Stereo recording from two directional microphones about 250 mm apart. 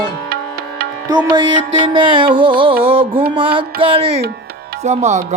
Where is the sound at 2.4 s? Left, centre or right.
Centre.